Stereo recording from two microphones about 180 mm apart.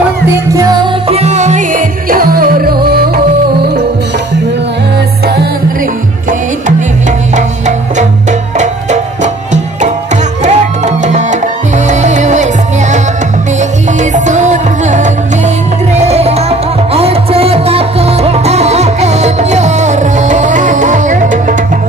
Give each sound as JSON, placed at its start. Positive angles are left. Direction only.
{"t": 1.0, "sound": "music", "side_deg": -35}
{"t": 7.3, "sound": "music", "side_deg": -40}
{"t": 14.1, "sound": "music", "side_deg": -40}